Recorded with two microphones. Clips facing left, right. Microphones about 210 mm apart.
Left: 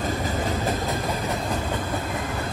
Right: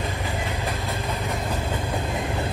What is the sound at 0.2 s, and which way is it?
Train, 45° left (ahead or behind).